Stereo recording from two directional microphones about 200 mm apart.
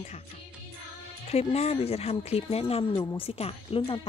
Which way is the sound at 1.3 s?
30° left (ahead or behind).